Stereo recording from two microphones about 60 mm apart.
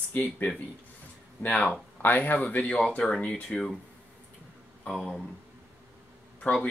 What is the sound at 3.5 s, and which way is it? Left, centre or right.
Speech, centre.